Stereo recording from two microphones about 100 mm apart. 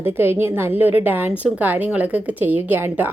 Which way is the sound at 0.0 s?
25° right (ahead or behind).